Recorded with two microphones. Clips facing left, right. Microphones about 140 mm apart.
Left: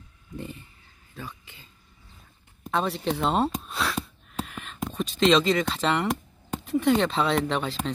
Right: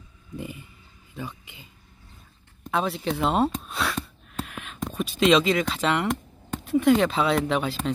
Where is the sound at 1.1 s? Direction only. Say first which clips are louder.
Right 4 dB; 15° right (ahead or behind).